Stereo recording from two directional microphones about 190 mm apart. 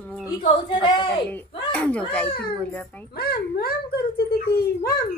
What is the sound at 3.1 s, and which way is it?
A child's voice, 55° left (ahead or behind).